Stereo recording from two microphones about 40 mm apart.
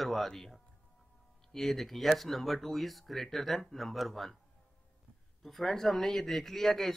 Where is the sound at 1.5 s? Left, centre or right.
Centre.